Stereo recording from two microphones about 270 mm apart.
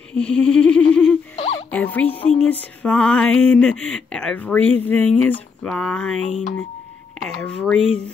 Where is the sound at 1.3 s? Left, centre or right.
Left.